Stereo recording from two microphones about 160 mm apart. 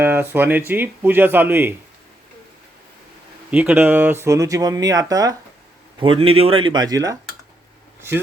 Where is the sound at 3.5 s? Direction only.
10° right (ahead or behind).